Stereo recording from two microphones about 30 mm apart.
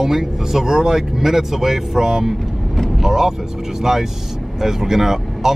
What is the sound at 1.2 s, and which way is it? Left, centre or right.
Speech, centre.